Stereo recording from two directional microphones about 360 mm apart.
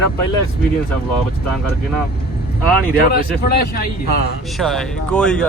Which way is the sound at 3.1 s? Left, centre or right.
Left.